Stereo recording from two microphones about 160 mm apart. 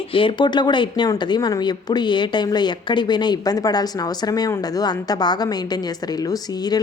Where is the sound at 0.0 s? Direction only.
35° left (ahead or behind).